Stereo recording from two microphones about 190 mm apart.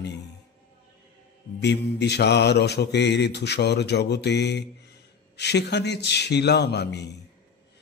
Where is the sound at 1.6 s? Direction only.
65° left (ahead or behind).